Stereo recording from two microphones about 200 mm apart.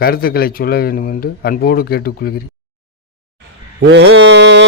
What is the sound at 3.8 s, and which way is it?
Mantra, 60° right (ahead or behind).